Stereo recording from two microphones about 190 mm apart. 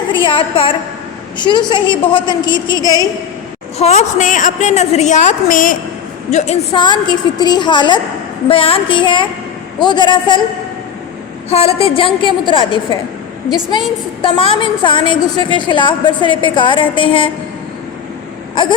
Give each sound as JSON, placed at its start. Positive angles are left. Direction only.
{"t": 0.1, "sound": "a woman's voice", "side_deg": 25}
{"t": 3.8, "sound": "a woman's voice", "side_deg": 35}
{"t": 6.7, "sound": "a woman's voice", "side_deg": 25}
{"t": 11.4, "sound": "a woman's voice", "side_deg": 35}